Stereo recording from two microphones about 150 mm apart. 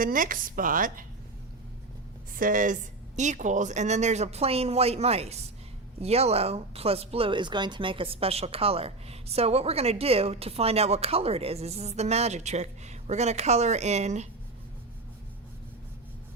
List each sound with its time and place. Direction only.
0.0 s a woman's voice: 65° right (ahead or behind)
2.3 s a woman's voice: 65° right (ahead or behind); by 14.3 s 50° right (ahead or behind)